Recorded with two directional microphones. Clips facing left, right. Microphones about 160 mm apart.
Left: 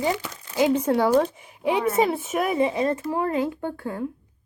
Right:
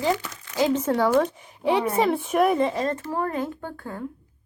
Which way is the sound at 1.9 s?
5° left (ahead or behind).